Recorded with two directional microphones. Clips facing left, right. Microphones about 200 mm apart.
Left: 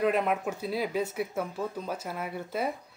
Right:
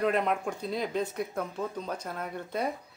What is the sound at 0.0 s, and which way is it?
Speech, 5° left (ahead or behind).